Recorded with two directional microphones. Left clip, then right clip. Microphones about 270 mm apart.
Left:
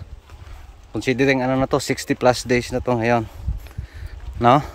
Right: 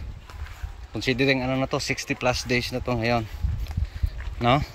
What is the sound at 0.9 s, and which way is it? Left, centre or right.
Speech, centre.